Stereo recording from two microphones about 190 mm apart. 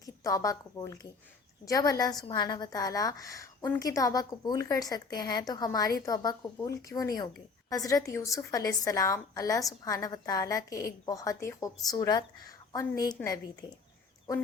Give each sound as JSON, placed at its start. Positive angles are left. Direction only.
{"t": 0.0, "sound": "a woman's voice", "side_deg": 20}